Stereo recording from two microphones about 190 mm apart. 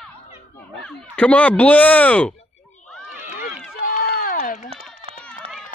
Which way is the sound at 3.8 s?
45° left (ahead or behind).